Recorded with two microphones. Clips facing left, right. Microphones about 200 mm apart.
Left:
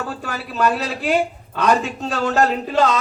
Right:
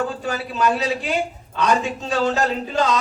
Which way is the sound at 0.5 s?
55° left (ahead or behind).